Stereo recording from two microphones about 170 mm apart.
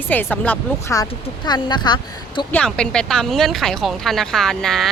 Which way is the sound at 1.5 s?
25° left (ahead or behind).